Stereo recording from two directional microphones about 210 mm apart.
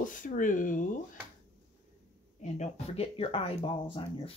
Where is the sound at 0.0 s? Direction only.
40° left (ahead or behind).